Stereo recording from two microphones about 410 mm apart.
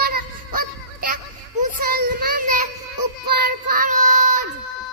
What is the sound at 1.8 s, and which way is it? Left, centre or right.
Child singing, right.